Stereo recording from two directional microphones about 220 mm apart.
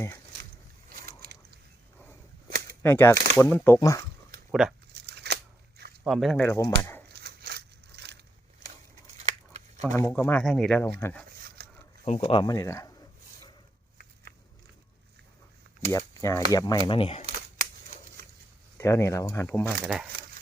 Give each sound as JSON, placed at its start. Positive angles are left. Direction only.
{"t": 1.0, "sound": "a sound", "side_deg": -45}
{"t": 2.8, "sound": "speech", "side_deg": 10}
{"t": 5.0, "sound": "shuffling cards", "side_deg": -50}
{"t": 6.1, "sound": "speech", "side_deg": 0}
{"t": 7.1, "sound": "a sound", "side_deg": -45}
{"t": 9.1, "sound": "scissors", "side_deg": -30}
{"t": 9.8, "sound": "speech", "side_deg": 10}
{"t": 11.3, "sound": "a sound", "side_deg": -45}
{"t": 12.0, "sound": "speech", "side_deg": 30}
{"t": 15.9, "sound": "speech", "side_deg": 10}
{"t": 17.2, "sound": "scissors", "side_deg": -35}
{"t": 18.8, "sound": "speech", "side_deg": 15}